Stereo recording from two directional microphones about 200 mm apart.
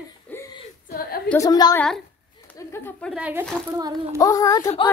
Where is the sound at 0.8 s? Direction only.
50° left (ahead or behind).